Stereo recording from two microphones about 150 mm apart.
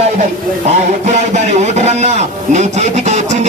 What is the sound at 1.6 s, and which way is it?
Speech, 50° right (ahead or behind).